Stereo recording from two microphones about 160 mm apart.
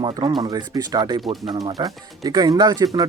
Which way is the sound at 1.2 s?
Centre (ahead or behind).